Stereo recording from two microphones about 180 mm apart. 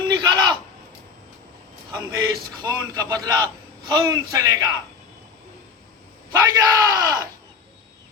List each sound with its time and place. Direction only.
0.1 s a sound: 25° right (ahead or behind)
2.0 s a man's voice: 20° right (ahead or behind)
6.3 s speech: 15° right (ahead or behind)